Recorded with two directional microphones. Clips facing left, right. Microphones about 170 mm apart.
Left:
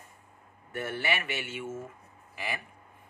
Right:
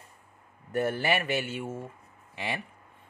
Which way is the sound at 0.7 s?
40° right (ahead or behind).